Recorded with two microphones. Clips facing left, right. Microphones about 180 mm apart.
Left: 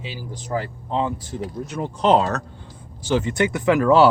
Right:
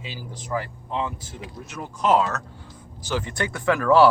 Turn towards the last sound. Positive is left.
turn(degrees=20)  # may be behind; listen again after turning